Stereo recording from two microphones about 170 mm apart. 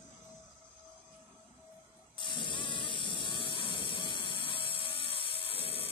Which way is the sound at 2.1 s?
30° left (ahead or behind).